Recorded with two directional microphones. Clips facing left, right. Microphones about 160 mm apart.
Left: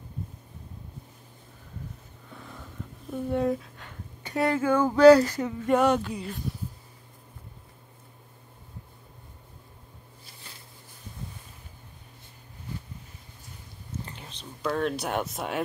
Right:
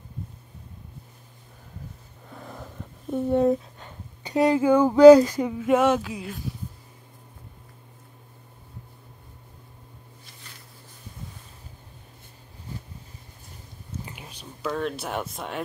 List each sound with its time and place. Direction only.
2.3 s vehicle: 40° right (ahead or behind)
3.1 s speech: 25° right (ahead or behind); by 6.4 s centre (ahead or behind)
14.0 s whispering: 10° right (ahead or behind)
14.7 s speech: centre (ahead or behind)